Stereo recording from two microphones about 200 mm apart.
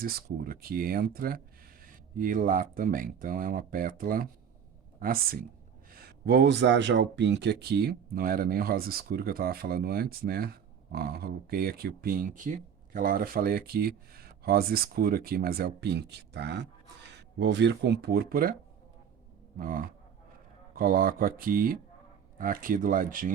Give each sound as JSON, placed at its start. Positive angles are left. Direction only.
{"t": 0.0, "sound": "speech", "side_deg": -45}
{"t": 19.5, "sound": "speech", "side_deg": -45}